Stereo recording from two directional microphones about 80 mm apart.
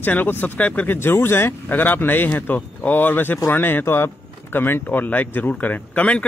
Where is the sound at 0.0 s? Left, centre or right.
Left.